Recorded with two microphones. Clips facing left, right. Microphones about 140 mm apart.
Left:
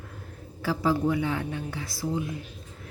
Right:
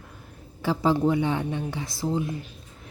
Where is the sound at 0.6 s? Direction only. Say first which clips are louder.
Right 3 dB; 25° right (ahead or behind).